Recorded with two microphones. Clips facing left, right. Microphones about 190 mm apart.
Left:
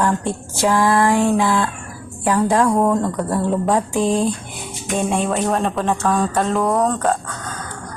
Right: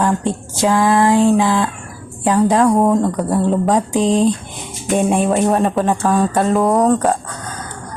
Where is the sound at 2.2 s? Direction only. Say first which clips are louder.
Right 3 dB; 20° right (ahead or behind).